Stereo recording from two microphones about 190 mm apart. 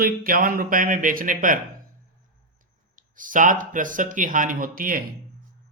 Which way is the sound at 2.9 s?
45° right (ahead or behind).